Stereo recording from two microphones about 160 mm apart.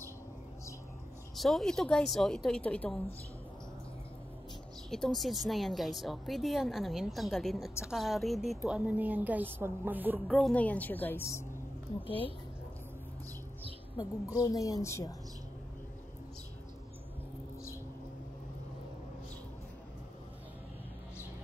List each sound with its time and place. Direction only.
1.3 s a woman's voice: centre (ahead or behind)
4.9 s a woman's voice: centre (ahead or behind)
10.2 s a woman's voice: centre (ahead or behind)
14.4 s a woman's voice: 20° left (ahead or behind)